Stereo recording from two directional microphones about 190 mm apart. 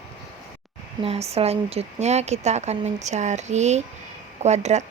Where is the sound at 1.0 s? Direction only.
35° right (ahead or behind).